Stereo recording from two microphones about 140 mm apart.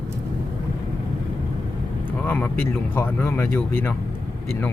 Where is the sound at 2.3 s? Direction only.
15° left (ahead or behind).